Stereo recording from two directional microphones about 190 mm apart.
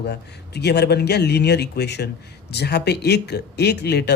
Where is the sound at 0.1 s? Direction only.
60° left (ahead or behind).